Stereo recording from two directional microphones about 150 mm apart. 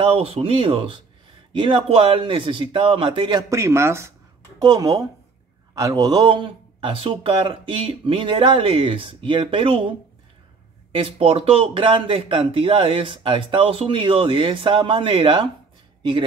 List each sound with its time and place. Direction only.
0.0 s speech: 40° right (ahead or behind)
11.1 s speech: 40° right (ahead or behind)